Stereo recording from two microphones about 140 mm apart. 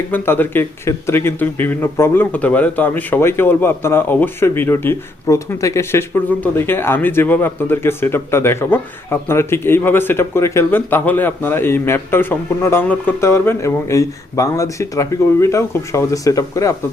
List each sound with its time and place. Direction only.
0.1 s speech: 15° left (ahead or behind)